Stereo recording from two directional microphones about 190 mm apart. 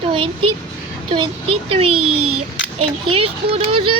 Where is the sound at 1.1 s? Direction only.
30° right (ahead or behind).